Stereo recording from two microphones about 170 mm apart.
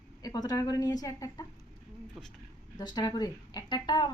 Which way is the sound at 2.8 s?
25° left (ahead or behind).